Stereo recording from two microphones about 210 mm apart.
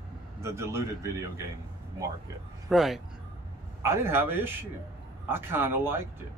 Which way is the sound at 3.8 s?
10° right (ahead or behind).